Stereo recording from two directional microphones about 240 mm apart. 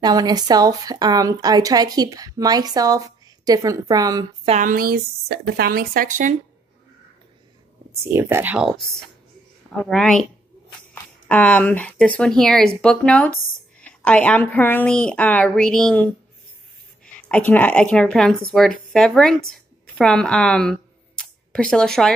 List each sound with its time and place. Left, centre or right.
0.0 s speech: centre
4.5 s speech: right
7.9 s a woman's voice: centre
11.2 s a woman's voice: centre
21.2 s a sound: centre